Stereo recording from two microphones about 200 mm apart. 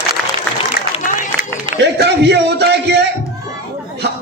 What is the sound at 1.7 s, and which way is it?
Speech, 55° right (ahead or behind).